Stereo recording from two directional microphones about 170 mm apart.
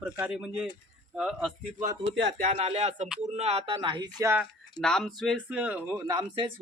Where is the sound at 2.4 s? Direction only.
40° right (ahead or behind); by 4.3 s 20° right (ahead or behind).